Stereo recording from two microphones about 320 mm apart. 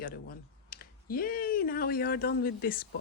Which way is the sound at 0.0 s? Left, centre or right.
Left.